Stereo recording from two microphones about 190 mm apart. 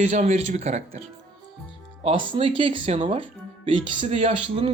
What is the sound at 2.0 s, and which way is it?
Speech, 30° right (ahead or behind).